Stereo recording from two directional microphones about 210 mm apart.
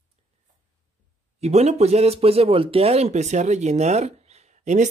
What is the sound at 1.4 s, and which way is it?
Speech, 30° right (ahead or behind).